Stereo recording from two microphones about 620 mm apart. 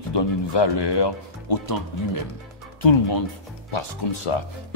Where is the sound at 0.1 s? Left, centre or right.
Left.